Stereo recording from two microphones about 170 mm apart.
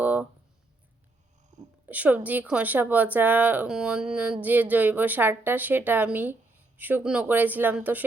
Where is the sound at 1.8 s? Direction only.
10° right (ahead or behind).